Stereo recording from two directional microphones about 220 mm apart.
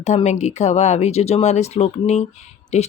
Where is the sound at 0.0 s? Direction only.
30° left (ahead or behind).